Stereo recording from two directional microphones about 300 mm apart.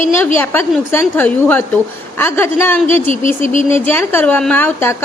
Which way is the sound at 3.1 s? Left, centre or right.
Left.